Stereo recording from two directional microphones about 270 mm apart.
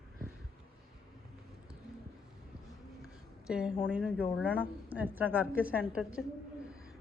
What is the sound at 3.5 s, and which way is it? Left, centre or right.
Speech, centre.